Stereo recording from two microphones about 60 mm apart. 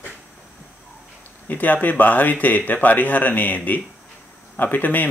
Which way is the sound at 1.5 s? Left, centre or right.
Left.